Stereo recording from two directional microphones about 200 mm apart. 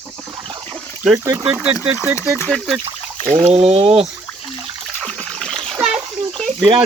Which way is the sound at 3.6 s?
30° right (ahead or behind).